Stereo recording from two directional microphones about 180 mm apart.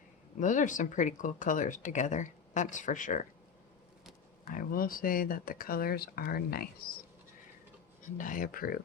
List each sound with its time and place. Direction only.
0.3 s speech: 45° left (ahead or behind)
4.4 s speech: 50° left (ahead or behind)
8.2 s speech: 50° left (ahead or behind)